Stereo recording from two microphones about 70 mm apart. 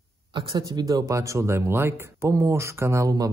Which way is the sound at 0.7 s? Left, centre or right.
Right.